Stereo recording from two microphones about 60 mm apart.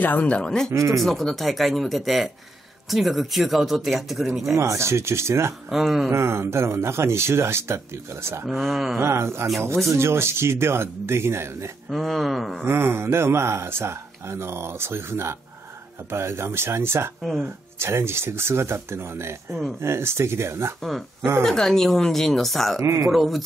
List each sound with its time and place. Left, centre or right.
0.0 s speech: left
0.7 s speech: right
0.9 s speech: centre
4.6 s speech: right
5.7 s speech: centre
6.0 s speech: right
8.5 s speech: centre
9.0 s speech: right
11.9 s speech: centre
12.6 s speech: right
20.8 s speech: centre
22.8 s speech: right
23.1 s speech: centre